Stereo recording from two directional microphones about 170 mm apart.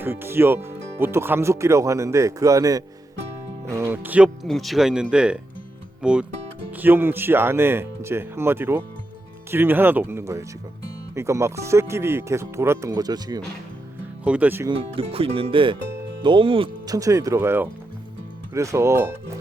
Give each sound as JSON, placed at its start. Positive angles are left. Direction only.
{"t": 0.0, "sound": "speech", "side_deg": -15}
{"t": 4.4, "sound": "speech", "side_deg": 0}
{"t": 14.3, "sound": "speech", "side_deg": -10}
{"t": 14.9, "sound": "speech", "side_deg": -35}